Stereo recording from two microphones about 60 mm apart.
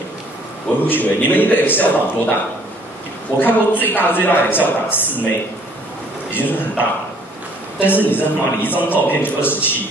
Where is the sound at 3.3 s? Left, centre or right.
Left.